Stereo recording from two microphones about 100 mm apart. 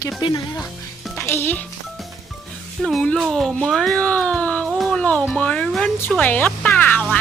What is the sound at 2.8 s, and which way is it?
Speech, centre (ahead or behind).